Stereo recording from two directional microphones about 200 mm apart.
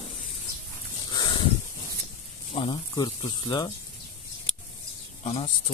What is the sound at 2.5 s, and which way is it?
Speech, 25° left (ahead or behind).